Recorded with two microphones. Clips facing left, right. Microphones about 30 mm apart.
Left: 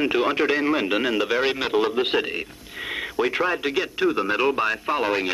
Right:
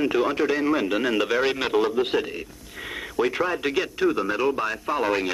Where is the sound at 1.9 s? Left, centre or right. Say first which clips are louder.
Left 1 dB; left.